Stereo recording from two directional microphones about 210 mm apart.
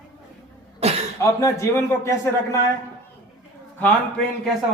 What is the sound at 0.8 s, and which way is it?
Cough, 30° right (ahead or behind).